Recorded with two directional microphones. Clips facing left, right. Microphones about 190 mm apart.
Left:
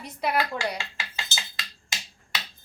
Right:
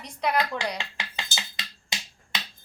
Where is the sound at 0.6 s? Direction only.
20° right (ahead or behind).